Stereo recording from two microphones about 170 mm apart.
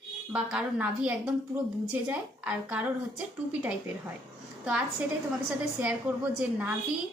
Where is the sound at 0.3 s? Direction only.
5° right (ahead or behind).